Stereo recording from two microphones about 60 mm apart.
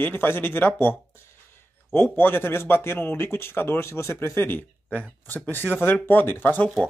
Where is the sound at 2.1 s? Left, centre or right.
Left.